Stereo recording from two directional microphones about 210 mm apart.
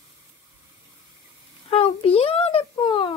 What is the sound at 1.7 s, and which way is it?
Speech, 30° left (ahead or behind).